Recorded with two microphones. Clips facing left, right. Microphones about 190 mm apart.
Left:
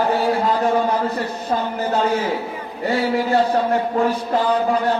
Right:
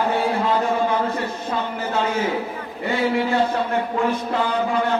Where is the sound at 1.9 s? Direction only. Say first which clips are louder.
Left 4 dB; 35° left (ahead or behind).